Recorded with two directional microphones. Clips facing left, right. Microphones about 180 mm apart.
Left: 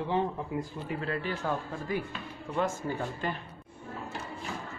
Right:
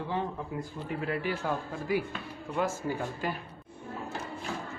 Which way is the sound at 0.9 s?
10° right (ahead or behind).